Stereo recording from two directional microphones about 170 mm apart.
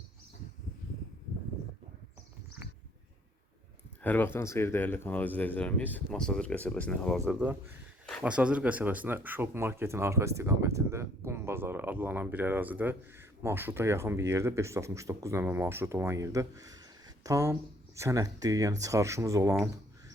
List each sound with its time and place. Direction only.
4.0 s speech: 10° left (ahead or behind)
7.3 s speech: 5° right (ahead or behind)